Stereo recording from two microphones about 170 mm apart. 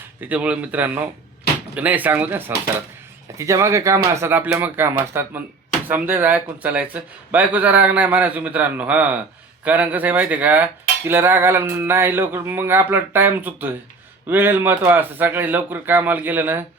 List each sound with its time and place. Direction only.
0.2 s speech: 10° right (ahead or behind)